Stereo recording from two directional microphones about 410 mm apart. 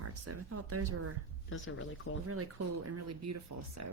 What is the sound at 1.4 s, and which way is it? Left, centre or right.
Speech, left.